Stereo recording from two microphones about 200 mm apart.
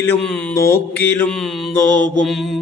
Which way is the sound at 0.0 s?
5° left (ahead or behind).